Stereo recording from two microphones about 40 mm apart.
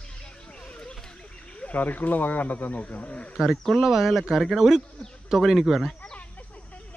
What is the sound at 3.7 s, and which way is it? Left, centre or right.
Speech, centre.